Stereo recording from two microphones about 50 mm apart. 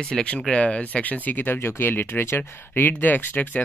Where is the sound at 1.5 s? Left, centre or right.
Left.